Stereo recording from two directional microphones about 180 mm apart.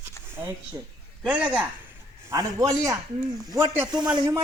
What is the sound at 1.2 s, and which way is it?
A man's voice, 5° right (ahead or behind).